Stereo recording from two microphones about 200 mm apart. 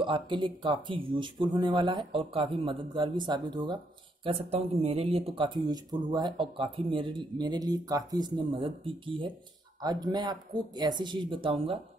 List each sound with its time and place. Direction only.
0.0 s speech: 25° right (ahead or behind)